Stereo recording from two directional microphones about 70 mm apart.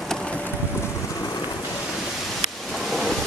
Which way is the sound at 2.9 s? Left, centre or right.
Centre.